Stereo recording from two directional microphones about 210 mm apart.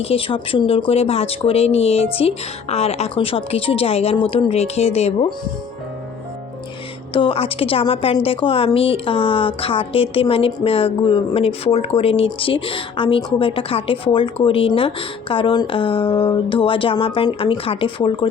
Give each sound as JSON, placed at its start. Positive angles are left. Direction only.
{"t": 0.0, "sound": "a woman's voice", "side_deg": 25}
{"t": 7.1, "sound": "a woman's voice", "side_deg": 25}